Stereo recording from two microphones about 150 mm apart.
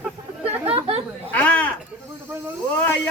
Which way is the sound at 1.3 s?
10° left (ahead or behind).